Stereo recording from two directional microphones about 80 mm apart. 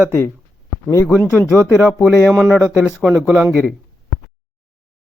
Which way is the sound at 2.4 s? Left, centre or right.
Centre.